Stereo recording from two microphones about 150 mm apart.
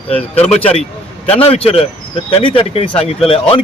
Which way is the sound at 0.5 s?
45° left (ahead or behind).